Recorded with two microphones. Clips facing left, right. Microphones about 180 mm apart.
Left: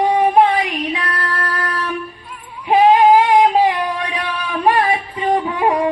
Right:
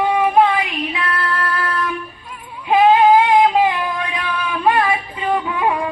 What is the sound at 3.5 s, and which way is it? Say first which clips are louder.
Singing: left 1 dB; 35° left (ahead or behind).